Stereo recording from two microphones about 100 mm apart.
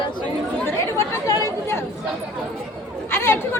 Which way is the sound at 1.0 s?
35° left (ahead or behind).